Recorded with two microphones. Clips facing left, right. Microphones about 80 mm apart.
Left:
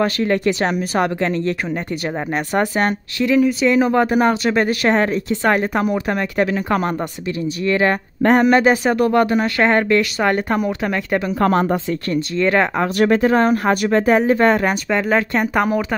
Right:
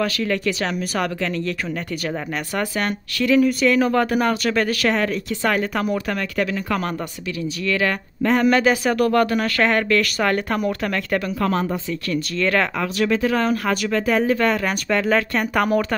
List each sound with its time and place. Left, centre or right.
0.0 s speech: left
2.5 s speech: left
3.4 s speech: left
11.4 s speech: left
12.4 s speech: left
12.8 s speech: left
14.9 s speech: centre